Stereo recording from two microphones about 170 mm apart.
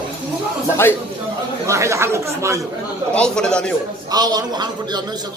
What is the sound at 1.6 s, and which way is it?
Speech, 15° right (ahead or behind).